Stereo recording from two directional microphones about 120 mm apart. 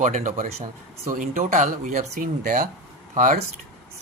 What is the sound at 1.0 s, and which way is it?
Speech, 90° right.